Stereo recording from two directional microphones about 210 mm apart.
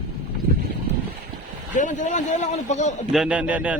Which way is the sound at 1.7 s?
35° left (ahead or behind).